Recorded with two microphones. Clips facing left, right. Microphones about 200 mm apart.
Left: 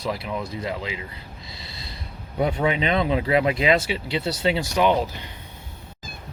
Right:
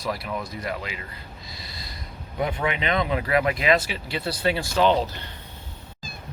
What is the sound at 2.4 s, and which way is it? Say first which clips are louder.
Speech: left 4 dB; 30° left (ahead or behind).